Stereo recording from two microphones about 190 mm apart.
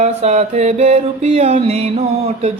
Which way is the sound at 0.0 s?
35° right (ahead or behind).